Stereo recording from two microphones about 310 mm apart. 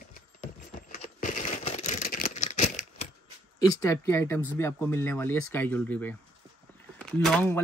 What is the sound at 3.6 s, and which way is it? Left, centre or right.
Speech, centre.